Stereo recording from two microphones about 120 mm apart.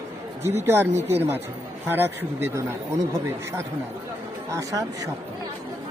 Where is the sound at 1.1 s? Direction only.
20° right (ahead or behind).